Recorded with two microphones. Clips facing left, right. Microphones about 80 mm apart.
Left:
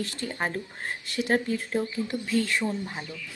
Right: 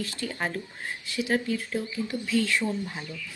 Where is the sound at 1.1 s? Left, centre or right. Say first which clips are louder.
Left 1 dB; left.